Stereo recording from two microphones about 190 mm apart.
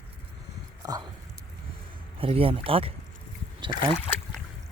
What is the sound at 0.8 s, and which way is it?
Speech, 20° right (ahead or behind).